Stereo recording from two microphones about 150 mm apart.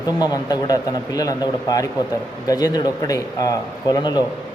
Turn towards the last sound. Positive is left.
turn(degrees=30)  # may be behind; listen again after turning